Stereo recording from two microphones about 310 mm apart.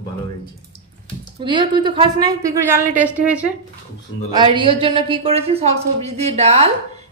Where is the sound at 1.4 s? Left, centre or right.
Centre.